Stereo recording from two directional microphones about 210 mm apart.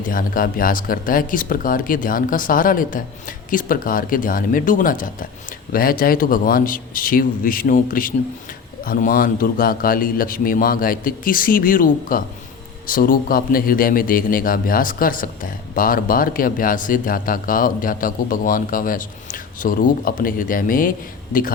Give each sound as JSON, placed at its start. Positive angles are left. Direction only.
{"t": 0.0, "sound": "a man's voice", "side_deg": 40}